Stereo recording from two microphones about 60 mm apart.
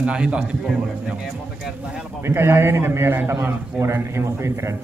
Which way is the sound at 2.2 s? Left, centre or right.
Right.